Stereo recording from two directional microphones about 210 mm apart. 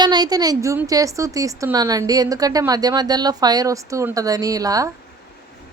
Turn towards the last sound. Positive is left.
turn(degrees=-15)  # may be behind; listen again after turning